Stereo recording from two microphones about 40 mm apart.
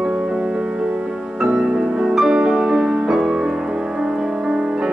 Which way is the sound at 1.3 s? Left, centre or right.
Centre.